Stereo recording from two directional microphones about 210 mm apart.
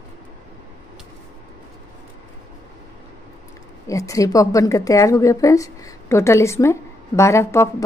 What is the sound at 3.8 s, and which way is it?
A woman's voice, 15° left (ahead or behind).